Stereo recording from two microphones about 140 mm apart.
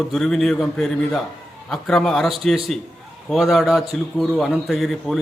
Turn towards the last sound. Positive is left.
turn(degrees=0)  # may be behind; listen again after turning